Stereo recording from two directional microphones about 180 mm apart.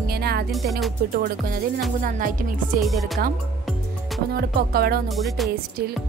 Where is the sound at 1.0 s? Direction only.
60° right (ahead or behind).